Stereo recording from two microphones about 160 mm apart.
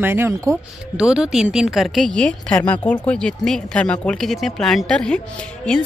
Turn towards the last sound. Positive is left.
turn(degrees=5)  # may be behind; listen again after turning